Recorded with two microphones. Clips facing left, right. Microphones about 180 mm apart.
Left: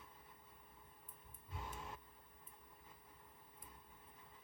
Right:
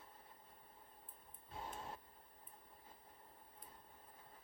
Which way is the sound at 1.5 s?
25° right (ahead or behind).